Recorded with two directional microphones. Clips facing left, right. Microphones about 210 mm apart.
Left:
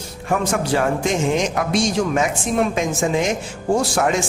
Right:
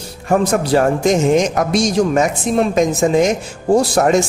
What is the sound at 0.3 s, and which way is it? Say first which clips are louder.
A woman's voice: right 5 dB; 40° right (ahead or behind).